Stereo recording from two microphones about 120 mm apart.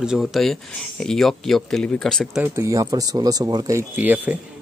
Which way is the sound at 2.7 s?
30° right (ahead or behind).